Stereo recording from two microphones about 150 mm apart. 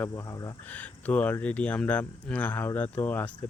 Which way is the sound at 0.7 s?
10° left (ahead or behind).